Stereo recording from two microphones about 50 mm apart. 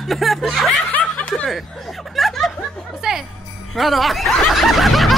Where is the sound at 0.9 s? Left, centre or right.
Left.